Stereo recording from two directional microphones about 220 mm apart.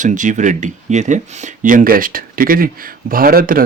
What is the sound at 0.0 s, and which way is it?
Speech, 35° right (ahead or behind).